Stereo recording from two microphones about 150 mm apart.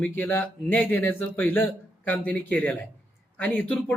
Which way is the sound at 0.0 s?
15° left (ahead or behind).